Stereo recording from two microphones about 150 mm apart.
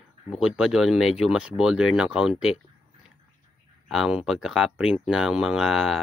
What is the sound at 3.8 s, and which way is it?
Speech, centre (ahead or behind).